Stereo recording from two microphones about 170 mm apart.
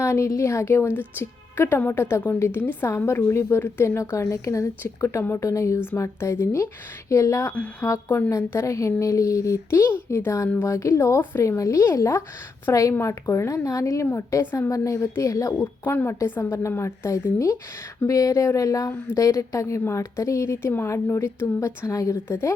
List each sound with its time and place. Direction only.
0.0 s a woman's voice: 15° left (ahead or behind)